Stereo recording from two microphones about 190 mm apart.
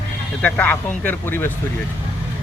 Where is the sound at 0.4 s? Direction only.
5° left (ahead or behind).